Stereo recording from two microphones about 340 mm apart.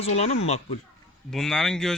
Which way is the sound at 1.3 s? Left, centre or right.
Centre.